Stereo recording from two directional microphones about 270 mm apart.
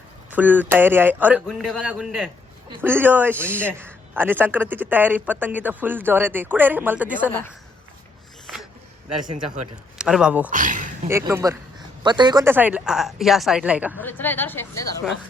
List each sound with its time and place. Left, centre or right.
0.3 s a man's voice: centre
7.3 s speech: centre
10.0 s speech: centre
10.5 s speech: right
11.1 s a man's voice: centre
14.0 s speech: centre